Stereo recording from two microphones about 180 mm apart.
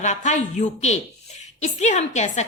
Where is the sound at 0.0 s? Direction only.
40° left (ahead or behind).